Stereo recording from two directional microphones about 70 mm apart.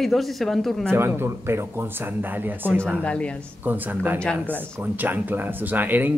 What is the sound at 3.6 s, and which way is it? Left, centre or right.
Speech, right.